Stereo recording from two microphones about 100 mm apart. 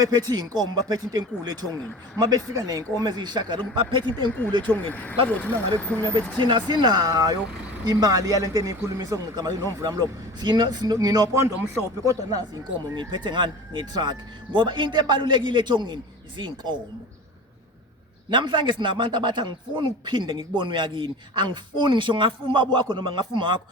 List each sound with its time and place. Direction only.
0.0 s speech: 45° right (ahead or behind)
4.6 s speech: 15° left (ahead or behind)
6.3 s a man's voice: 50° right (ahead or behind)
13.0 s speech: 50° right (ahead or behind)
18.3 s speech: 50° right (ahead or behind)